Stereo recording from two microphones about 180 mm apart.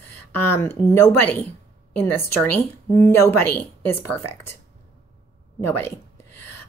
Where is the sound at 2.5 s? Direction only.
15° left (ahead or behind).